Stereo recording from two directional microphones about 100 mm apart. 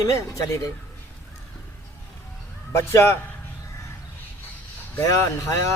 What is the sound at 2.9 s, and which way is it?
Speech, 25° left (ahead or behind).